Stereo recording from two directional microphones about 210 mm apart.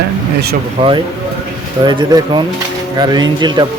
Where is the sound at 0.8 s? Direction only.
25° right (ahead or behind).